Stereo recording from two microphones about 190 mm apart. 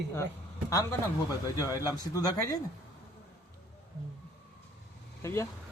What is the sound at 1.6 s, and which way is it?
Speech, 20° left (ahead or behind).